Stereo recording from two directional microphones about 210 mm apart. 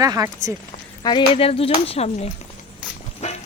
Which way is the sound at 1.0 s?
25° left (ahead or behind).